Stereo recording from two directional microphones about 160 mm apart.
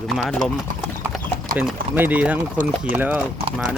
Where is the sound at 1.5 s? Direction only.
60° right (ahead or behind).